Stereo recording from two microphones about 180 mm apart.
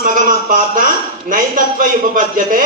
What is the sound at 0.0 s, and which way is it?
A man's voice, 50° right (ahead or behind).